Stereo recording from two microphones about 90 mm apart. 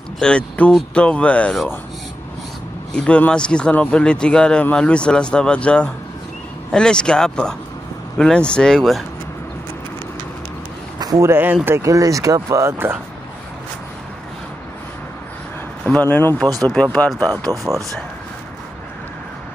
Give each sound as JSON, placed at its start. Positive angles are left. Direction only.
{"t": 0.2, "sound": "a man's voice", "side_deg": 10}
{"t": 2.9, "sound": "a man's voice", "side_deg": 10}
{"t": 11.0, "sound": "speech", "side_deg": -40}
{"t": 15.8, "sound": "a man's voice", "side_deg": 15}
{"t": 17.5, "sound": "speech", "side_deg": -35}